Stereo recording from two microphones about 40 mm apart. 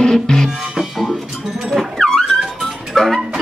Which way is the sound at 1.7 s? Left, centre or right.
Centre.